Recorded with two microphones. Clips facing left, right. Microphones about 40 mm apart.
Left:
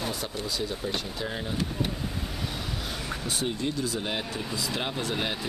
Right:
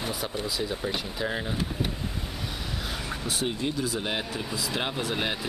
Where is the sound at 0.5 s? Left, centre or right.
Centre.